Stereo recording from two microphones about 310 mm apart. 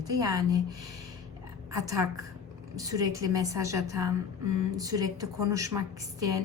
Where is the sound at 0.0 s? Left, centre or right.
Centre.